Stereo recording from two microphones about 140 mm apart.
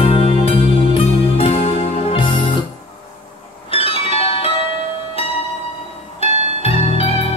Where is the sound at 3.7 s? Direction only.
40° left (ahead or behind).